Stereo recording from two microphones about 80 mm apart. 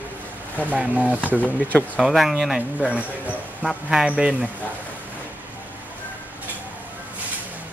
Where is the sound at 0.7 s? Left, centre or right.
Centre.